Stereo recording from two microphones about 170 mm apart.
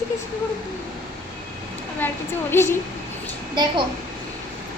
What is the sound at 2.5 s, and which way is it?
Speech, 15° left (ahead or behind).